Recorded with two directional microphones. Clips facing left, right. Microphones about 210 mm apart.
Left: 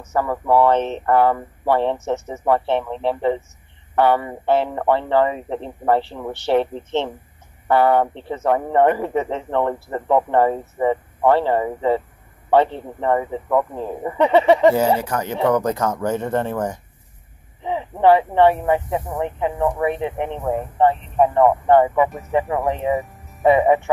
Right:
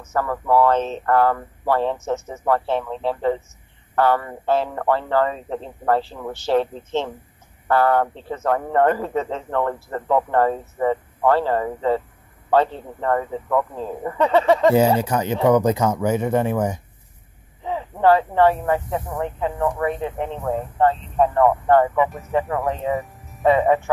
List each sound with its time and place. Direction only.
0.1 s speech: 15° left (ahead or behind)
15.0 s speech: 20° right (ahead or behind)
17.6 s speech: 15° left (ahead or behind)
22.3 s speech: 20° left (ahead or behind)